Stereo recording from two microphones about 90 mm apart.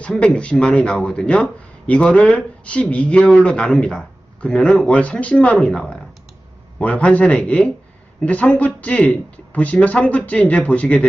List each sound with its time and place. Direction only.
0.0 s a man's voice: 10° left (ahead or behind)